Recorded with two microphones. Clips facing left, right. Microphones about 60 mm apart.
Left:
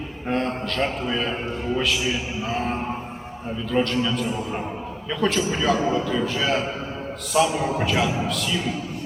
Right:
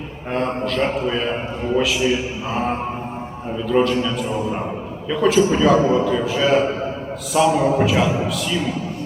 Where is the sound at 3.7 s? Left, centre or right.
Centre.